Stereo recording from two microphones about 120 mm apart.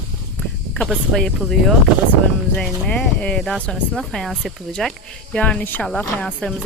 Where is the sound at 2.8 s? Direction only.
10° left (ahead or behind).